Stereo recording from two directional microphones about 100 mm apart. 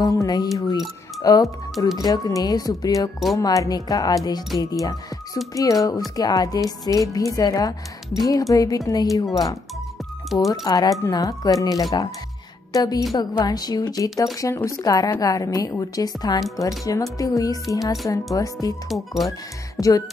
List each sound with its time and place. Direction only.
0.0 s a woman's voice: 35° left (ahead or behind)
18.9 s speech: centre (ahead or behind)